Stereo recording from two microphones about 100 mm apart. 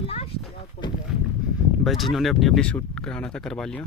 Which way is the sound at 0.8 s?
65° left (ahead or behind).